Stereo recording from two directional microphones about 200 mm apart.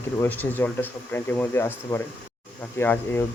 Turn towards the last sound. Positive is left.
turn(degrees=10)  # may be behind; listen again after turning